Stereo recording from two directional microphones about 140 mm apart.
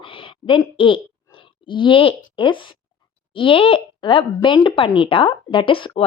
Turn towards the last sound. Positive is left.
turn(degrees=40)  # may be behind; listen again after turning